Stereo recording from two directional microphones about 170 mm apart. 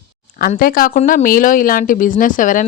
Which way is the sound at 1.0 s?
45° left (ahead or behind).